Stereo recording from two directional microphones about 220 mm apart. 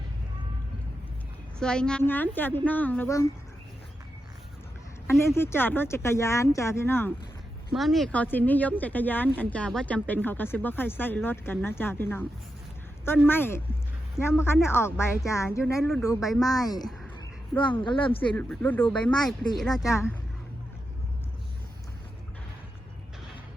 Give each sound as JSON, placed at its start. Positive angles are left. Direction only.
{"t": 1.5, "sound": "speech", "side_deg": 5}
{"t": 5.2, "sound": "speech", "side_deg": 10}
{"t": 7.7, "sound": "speech", "side_deg": 0}
{"t": 13.2, "sound": "speech", "side_deg": 10}
{"t": 18.3, "sound": "speech", "side_deg": 5}